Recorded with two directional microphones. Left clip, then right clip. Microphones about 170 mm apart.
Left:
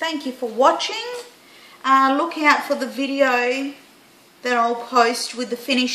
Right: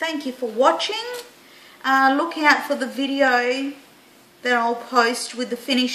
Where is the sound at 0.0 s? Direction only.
10° right (ahead or behind).